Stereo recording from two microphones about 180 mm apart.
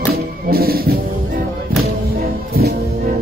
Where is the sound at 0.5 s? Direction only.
55° right (ahead or behind).